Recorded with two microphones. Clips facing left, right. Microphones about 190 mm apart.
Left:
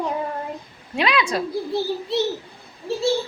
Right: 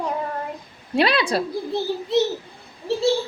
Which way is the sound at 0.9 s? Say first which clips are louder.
Right 2 dB; 35° right (ahead or behind).